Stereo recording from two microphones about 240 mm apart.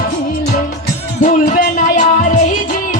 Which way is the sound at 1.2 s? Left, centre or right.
Left.